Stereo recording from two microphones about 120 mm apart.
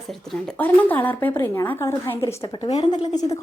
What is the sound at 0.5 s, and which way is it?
A woman's voice, 15° left (ahead or behind).